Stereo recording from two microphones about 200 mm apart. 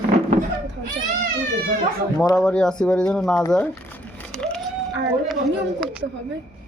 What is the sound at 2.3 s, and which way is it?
Speech, 5° left (ahead or behind).